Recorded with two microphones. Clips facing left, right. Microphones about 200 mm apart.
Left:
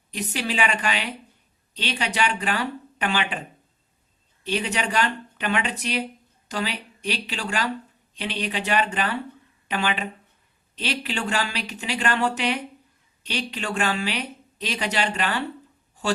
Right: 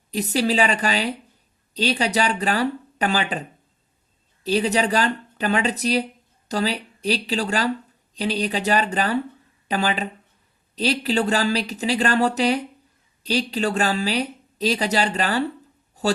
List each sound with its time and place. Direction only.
0.1 s speech: 35° right (ahead or behind)
4.4 s speech: 35° right (ahead or behind)